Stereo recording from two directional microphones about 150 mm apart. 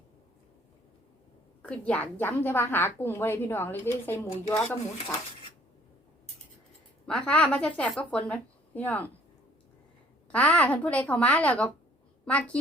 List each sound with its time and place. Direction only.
1.6 s a woman's voice: 10° left (ahead or behind)
7.1 s a woman's voice: 5° left (ahead or behind)
10.3 s a woman's voice: 10° left (ahead or behind)